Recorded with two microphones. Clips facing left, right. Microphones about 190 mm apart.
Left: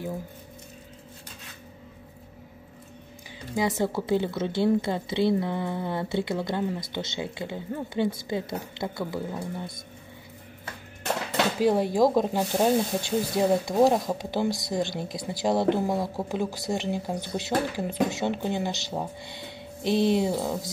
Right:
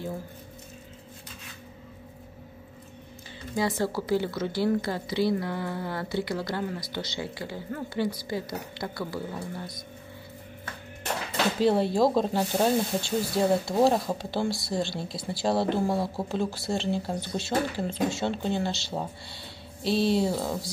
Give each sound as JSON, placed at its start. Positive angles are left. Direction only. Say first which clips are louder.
{"t": 3.5, "sound": "speech", "louder": "left 1 dB", "side_deg": 20}
{"t": 11.6, "sound": "speech", "louder": "left 1 dB", "side_deg": 15}